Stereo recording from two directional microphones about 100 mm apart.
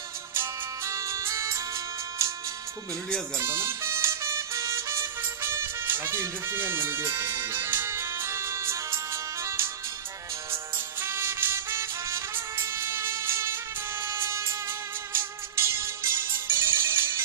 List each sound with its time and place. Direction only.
0.9 s music: 30° right (ahead or behind)
3.3 s music: 25° right (ahead or behind)
11.0 s music: 25° right (ahead or behind)